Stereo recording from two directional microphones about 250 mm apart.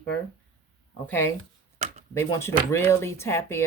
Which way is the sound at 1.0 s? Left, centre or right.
Centre.